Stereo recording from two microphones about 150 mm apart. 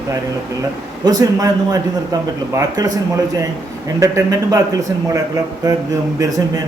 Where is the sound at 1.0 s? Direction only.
25° right (ahead or behind).